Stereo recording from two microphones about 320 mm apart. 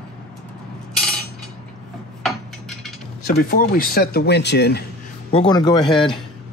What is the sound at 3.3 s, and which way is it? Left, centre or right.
Speech, left.